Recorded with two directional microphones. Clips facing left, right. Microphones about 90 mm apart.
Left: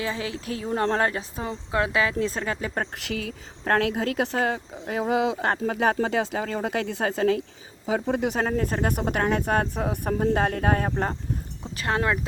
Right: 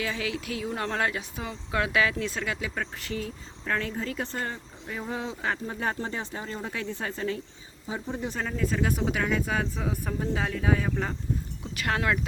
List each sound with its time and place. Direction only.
0.0 s speech: 30° left (ahead or behind)
3.0 s speech: 80° left
3.6 s speech: 65° left (ahead or behind); by 5.5 s 85° left
5.6 s speech: 70° left (ahead or behind)
7.9 s speech: 75° left (ahead or behind)
8.4 s speech: 50° left (ahead or behind)
10.9 s speech: 35° left (ahead or behind)